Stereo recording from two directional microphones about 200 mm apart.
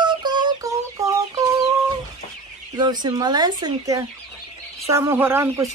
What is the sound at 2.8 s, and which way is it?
Speech, 20° right (ahead or behind).